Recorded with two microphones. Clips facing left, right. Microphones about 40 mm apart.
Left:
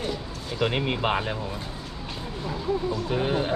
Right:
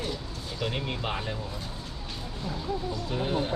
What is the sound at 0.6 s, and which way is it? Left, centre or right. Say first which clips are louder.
Speech: left 7 dB; left.